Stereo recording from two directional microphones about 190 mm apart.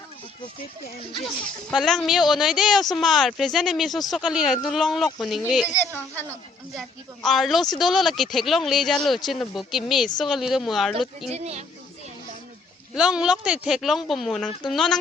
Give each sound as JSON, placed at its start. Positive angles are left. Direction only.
{"t": 1.7, "sound": "speech", "side_deg": 0}
{"t": 5.6, "sound": "a woman's voice", "side_deg": 15}
{"t": 11.3, "sound": "speech", "side_deg": -35}
{"t": 12.9, "sound": "speech", "side_deg": 0}